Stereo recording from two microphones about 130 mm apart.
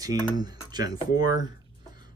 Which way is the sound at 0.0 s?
30° right (ahead or behind).